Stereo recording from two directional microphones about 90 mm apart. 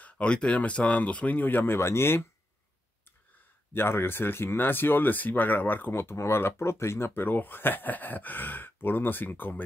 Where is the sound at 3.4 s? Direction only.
25° left (ahead or behind).